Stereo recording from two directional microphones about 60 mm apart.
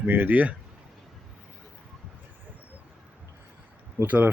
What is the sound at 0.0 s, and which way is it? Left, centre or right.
Speech, right.